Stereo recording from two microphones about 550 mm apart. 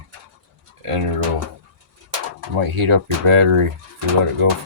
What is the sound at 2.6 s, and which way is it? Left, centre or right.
Speech, right.